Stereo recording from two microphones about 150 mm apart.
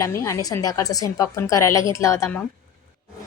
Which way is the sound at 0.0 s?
20° left (ahead or behind).